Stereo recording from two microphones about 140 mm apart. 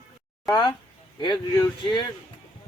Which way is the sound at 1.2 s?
30° left (ahead or behind).